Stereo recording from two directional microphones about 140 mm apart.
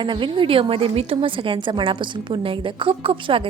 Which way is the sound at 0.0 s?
35° right (ahead or behind).